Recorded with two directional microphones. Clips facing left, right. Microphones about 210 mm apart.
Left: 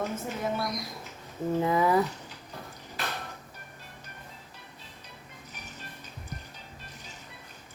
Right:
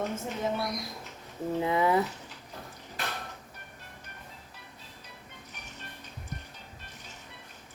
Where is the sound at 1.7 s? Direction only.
25° right (ahead or behind).